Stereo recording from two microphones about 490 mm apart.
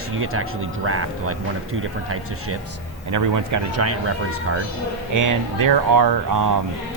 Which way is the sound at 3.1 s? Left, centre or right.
Right.